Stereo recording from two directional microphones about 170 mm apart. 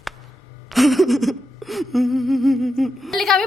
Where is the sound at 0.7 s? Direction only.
Centre (ahead or behind).